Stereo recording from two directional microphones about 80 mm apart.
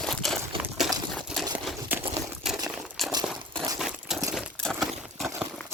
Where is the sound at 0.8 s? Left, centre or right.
Centre.